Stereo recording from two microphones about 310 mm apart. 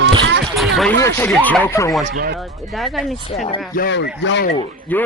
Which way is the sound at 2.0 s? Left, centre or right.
Right.